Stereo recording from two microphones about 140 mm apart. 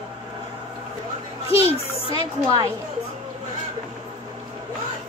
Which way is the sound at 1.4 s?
45° left (ahead or behind).